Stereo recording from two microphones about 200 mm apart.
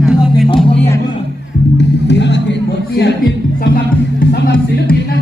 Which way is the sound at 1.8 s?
60° left (ahead or behind).